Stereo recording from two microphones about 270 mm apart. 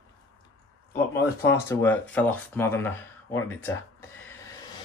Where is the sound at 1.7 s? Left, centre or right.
Centre.